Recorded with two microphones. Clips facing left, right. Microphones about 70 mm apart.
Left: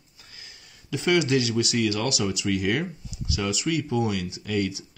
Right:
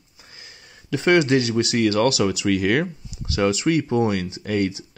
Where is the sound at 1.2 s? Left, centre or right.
Right.